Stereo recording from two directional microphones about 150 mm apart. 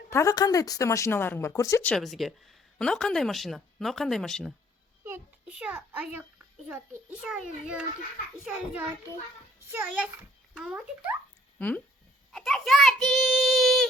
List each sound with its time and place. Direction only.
0.1 s a woman's voice: 20° left (ahead or behind)
1.8 s speech: 5° left (ahead or behind)
5.0 s a child's voice: 10° right (ahead or behind)
8.4 s a child's voice: 10° right (ahead or behind)
12.3 s a child's voice: centre (ahead or behind)